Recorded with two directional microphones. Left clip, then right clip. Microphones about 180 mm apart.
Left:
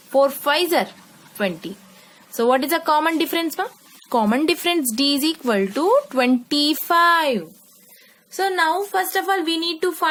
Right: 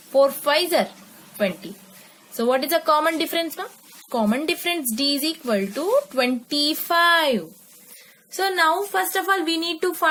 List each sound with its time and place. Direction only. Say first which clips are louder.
0.1 s a woman's voice: even; 35° left (ahead or behind)
8.4 s a woman's voice: even; 10° left (ahead or behind)